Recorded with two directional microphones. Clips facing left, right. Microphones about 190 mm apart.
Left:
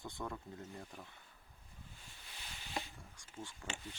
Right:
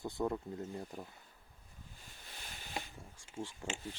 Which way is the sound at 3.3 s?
25° right (ahead or behind).